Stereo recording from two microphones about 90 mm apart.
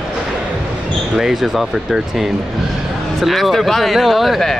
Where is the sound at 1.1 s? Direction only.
5° right (ahead or behind).